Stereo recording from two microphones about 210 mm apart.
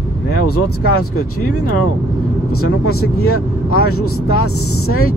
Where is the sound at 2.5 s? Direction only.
90° left.